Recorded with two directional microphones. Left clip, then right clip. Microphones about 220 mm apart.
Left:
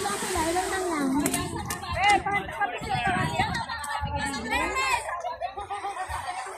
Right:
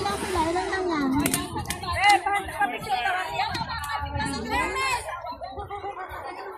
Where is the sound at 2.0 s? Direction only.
35° right (ahead or behind).